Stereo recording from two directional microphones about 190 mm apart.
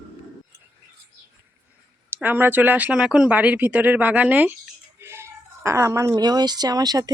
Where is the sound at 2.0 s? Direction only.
10° right (ahead or behind).